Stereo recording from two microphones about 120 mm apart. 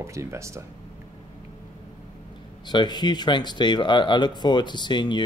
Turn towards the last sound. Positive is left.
turn(degrees=40)  # may be behind; listen again after turning